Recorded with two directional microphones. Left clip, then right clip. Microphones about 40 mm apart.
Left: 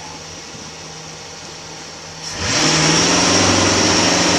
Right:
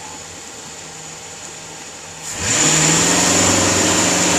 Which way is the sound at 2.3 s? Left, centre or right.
Centre.